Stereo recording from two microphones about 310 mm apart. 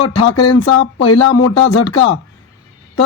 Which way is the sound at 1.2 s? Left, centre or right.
Left.